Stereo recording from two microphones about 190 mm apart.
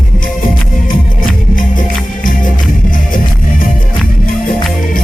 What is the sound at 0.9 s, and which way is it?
Music, 45° left (ahead or behind).